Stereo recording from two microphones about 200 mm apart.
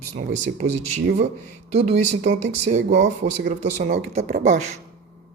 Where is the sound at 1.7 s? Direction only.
35° right (ahead or behind).